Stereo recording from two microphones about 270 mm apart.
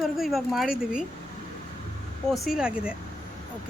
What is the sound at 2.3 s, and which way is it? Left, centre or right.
Speech, centre.